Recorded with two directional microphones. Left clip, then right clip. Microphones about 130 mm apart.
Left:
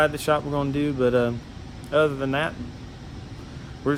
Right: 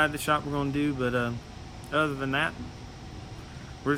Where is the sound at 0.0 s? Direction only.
10° left (ahead or behind).